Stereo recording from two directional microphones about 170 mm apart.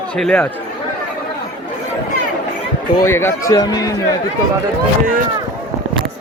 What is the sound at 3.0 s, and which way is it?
Speech, 15° left (ahead or behind).